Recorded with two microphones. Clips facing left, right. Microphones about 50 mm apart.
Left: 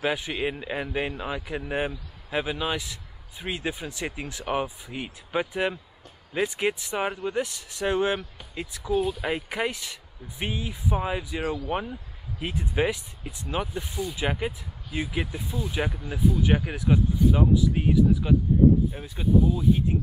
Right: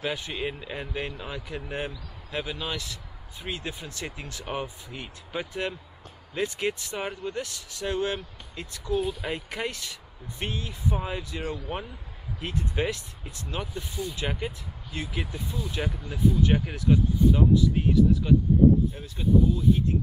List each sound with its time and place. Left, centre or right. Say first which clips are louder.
0.0 s speech: left 4 dB; centre
8.7 s speech: left 2 dB; centre